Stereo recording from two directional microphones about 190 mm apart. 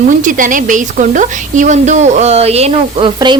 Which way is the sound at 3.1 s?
25° right (ahead or behind).